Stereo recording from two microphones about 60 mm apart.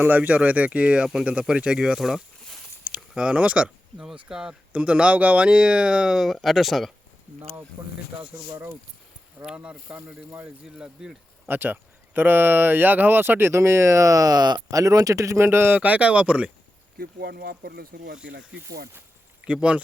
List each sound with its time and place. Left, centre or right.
0.0 s speech: right; by 2.2 s centre
2.8 s speech: centre
7.8 s speech: right
9.5 s speech: centre
11.4 s speech: right
15.4 s speech: right
19.5 s speech: centre